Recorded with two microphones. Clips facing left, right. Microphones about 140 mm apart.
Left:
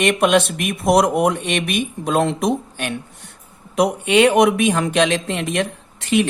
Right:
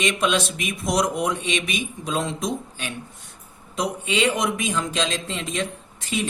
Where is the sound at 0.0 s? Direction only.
60° left (ahead or behind).